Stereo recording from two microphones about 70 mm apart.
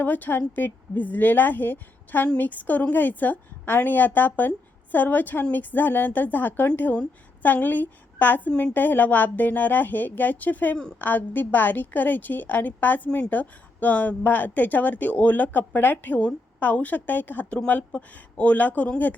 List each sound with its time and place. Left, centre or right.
0.0 s a woman's voice: left